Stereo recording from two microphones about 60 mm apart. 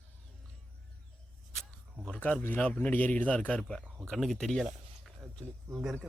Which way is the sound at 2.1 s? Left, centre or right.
Left.